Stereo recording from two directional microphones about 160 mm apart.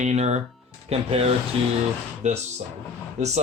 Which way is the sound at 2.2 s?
45° right (ahead or behind).